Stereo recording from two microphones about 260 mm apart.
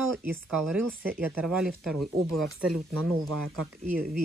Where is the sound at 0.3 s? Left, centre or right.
Centre.